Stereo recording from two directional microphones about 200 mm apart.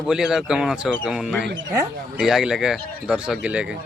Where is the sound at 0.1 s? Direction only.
5° right (ahead or behind).